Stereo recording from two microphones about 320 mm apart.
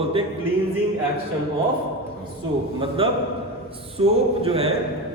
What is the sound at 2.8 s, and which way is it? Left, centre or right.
Speech, centre.